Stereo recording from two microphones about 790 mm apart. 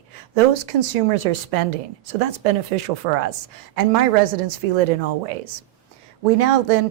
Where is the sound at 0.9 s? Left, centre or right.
Right.